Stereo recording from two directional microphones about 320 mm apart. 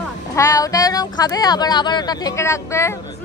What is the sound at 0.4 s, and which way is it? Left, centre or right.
Speech, centre.